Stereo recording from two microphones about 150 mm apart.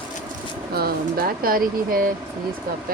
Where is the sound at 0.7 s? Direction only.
85° right.